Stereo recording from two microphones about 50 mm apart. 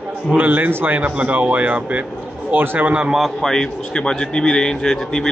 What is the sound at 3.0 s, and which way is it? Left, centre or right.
Speech, centre.